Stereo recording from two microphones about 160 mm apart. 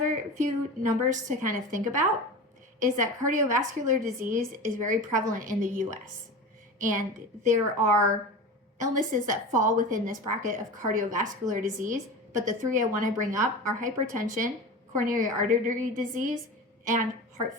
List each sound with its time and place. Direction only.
0.1 s a woman's voice: 50° right (ahead or behind)